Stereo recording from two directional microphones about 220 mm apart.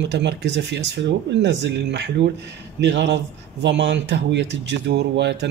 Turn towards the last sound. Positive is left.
turn(degrees=-50)  # may be behind; listen again after turning